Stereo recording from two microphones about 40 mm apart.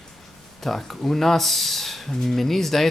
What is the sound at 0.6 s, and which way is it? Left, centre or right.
Speech, centre.